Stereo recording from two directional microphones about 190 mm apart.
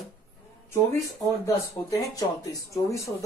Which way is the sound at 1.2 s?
15° left (ahead or behind).